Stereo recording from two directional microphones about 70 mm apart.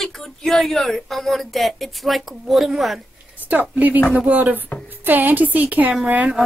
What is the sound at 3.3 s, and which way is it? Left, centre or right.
A woman's voice, right.